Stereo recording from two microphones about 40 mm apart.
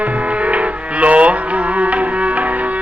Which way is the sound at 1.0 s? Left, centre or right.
Right.